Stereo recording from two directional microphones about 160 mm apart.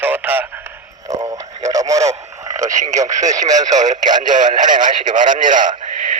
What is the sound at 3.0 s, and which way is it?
Speech, 20° right (ahead or behind).